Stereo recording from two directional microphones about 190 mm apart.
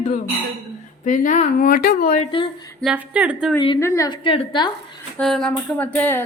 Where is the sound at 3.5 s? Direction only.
25° left (ahead or behind).